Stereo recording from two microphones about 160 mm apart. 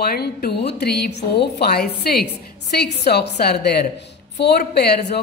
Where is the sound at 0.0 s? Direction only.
80° left.